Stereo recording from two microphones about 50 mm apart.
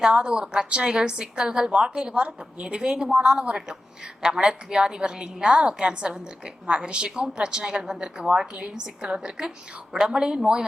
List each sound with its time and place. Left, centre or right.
0.0 s a woman's voice: centre